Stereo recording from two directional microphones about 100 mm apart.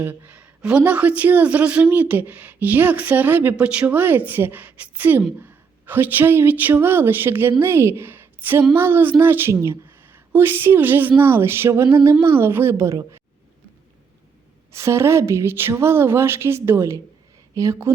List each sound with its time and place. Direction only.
0.0 s a woman's voice: 15° right (ahead or behind); by 13.2 s 30° right (ahead or behind)
14.7 s speech: 25° right (ahead or behind)